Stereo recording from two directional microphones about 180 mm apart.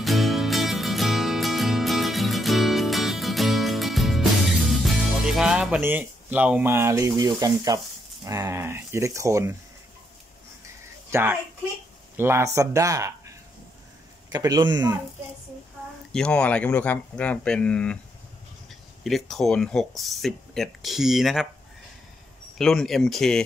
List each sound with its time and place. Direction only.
0.0 s music: centre (ahead or behind); by 7.2 s 15° right (ahead or behind)
7.2 s speech: 20° right (ahead or behind)
11.1 s speech: 15° right (ahead or behind)
14.3 s a man's voice: 20° right (ahead or behind)
16.1 s speech: 5° left (ahead or behind)
19.0 s speech: centre (ahead or behind)
22.6 s speech: centre (ahead or behind)